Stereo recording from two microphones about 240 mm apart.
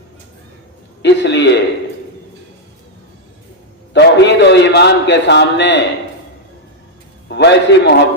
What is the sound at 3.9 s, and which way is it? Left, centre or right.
A man's voice, left.